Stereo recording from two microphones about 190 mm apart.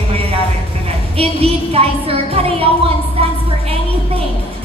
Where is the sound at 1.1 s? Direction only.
30° right (ahead or behind).